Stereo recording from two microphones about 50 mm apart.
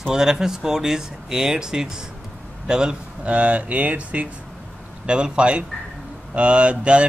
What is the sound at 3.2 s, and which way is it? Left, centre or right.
Speech, right.